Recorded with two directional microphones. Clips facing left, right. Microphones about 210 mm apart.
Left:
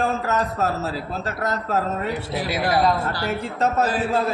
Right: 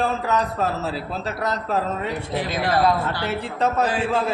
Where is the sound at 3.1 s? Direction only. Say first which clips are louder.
Even; 40° left (ahead or behind).